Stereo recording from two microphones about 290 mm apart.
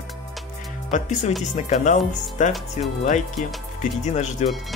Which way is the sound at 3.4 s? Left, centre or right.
Left.